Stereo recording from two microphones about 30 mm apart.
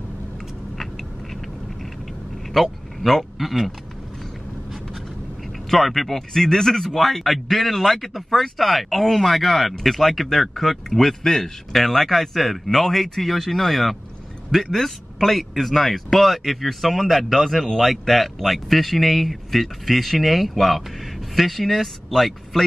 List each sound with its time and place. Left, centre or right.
2.6 s speech: centre
5.7 s speech: centre
11.2 s speech: centre